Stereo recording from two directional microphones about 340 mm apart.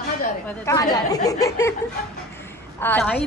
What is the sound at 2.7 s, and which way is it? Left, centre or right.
Speech, centre.